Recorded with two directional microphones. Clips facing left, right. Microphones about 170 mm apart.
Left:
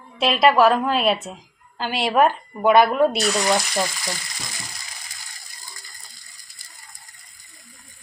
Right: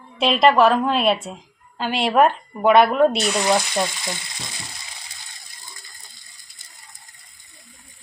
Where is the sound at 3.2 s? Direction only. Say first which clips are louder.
Right 1 dB; 20° right (ahead or behind).